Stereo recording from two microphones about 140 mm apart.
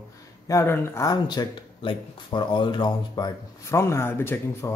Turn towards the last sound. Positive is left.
turn(degrees=15)  # may be behind; listen again after turning